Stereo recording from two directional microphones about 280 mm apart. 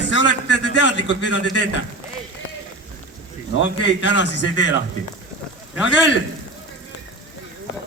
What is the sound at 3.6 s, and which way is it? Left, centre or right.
A man's voice, left.